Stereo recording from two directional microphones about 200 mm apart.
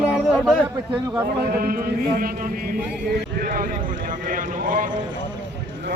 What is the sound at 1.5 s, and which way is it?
Speech, 45° right (ahead or behind).